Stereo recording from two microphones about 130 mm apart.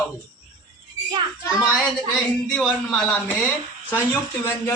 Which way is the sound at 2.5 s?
10° left (ahead or behind).